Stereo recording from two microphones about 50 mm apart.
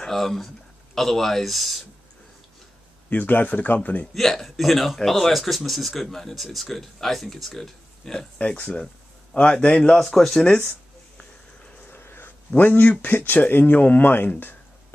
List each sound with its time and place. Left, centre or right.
0.0 s speech: centre
3.1 s speech: left
4.1 s speech: centre
8.4 s a man's voice: left
9.9 s speech: centre
11.9 s a sound: left
12.5 s speech: left